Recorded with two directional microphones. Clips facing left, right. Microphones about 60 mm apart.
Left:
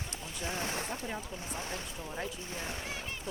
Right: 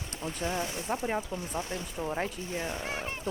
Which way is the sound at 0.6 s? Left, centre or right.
Left.